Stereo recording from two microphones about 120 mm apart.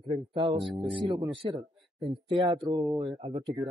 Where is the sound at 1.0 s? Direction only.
35° right (ahead or behind).